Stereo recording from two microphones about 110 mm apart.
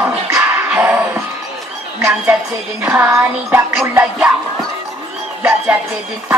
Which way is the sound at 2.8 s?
20° right (ahead or behind).